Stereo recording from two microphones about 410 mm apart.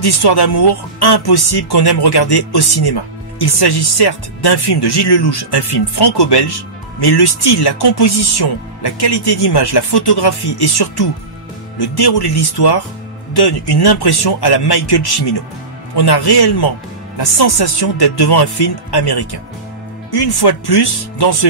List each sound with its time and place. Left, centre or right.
0.0 s speech: left